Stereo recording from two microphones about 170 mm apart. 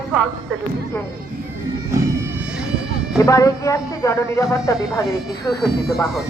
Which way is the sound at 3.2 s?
20° left (ahead or behind).